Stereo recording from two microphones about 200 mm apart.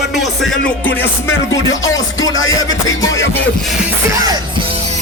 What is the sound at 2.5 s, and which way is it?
Music, 15° left (ahead or behind).